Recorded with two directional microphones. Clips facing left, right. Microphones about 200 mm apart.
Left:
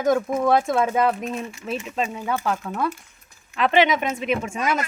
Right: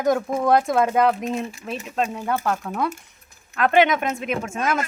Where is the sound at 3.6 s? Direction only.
50° right (ahead or behind).